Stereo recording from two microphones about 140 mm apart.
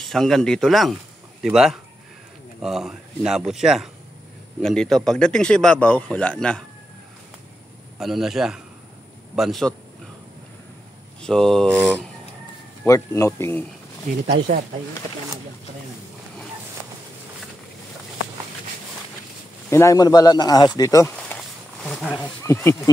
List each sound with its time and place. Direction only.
0.0 s speech: centre (ahead or behind)
8.0 s speech: centre (ahead or behind)
11.2 s speech: centre (ahead or behind)
12.8 s speech: 20° left (ahead or behind)
14.1 s speech: 65° right (ahead or behind)
19.7 s speech: 20° left (ahead or behind)
21.1 s a sound: 10° left (ahead or behind)
22.4 s speech: 20° left (ahead or behind)